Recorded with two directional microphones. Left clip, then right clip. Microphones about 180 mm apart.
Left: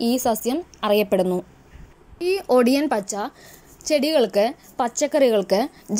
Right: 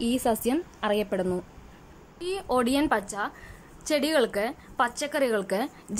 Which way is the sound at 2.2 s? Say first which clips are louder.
Left 8 dB; 15° left (ahead or behind).